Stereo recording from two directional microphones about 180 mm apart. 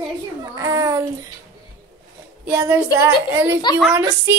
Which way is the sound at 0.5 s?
20° right (ahead or behind).